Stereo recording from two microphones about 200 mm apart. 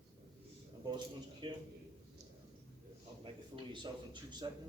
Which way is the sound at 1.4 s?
25° right (ahead or behind).